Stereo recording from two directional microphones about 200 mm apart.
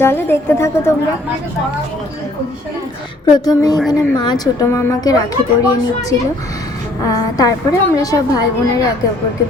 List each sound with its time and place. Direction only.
0.0 s a woman's voice: 10° left (ahead or behind)
3.3 s a sound: 20° left (ahead or behind)
3.9 s a woman's voice: 20° left (ahead or behind)